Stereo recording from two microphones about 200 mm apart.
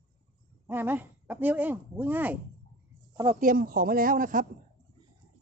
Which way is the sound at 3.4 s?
45° right (ahead or behind).